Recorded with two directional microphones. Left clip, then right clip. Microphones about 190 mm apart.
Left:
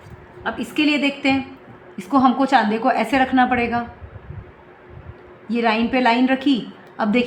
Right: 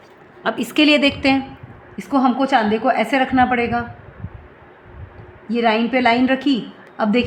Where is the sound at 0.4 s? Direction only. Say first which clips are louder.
Right 5 dB; 50° right (ahead or behind).